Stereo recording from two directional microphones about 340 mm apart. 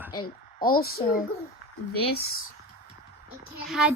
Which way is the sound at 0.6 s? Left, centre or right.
Left.